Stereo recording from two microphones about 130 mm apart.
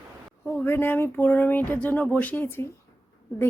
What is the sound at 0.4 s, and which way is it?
Speech, 15° left (ahead or behind).